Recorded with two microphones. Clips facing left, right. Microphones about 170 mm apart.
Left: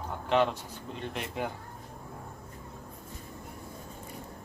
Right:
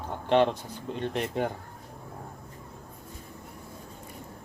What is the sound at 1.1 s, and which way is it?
Speech, 35° right (ahead or behind).